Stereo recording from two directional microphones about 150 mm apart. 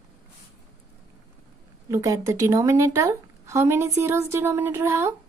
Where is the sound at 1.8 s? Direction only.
20° right (ahead or behind).